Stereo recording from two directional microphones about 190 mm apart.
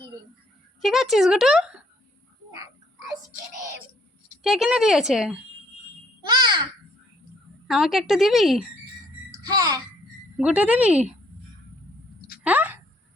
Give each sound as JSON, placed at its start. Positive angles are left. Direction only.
{"t": 0.8, "sound": "speech", "side_deg": 0}
{"t": 4.4, "sound": "speech", "side_deg": -5}
{"t": 6.2, "sound": "a sound", "side_deg": -20}
{"t": 7.7, "sound": "speech", "side_deg": 0}
{"t": 9.4, "sound": "a child's voice", "side_deg": -20}
{"t": 10.3, "sound": "speech", "side_deg": -5}
{"t": 12.4, "sound": "a sound", "side_deg": -10}